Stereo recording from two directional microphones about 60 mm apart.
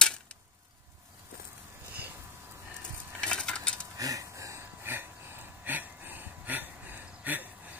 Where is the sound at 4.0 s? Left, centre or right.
Right.